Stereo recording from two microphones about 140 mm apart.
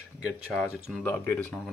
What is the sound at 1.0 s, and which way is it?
Speech, 15° left (ahead or behind).